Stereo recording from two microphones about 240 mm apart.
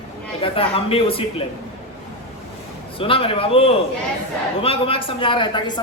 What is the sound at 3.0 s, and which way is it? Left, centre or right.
A man's voice, left.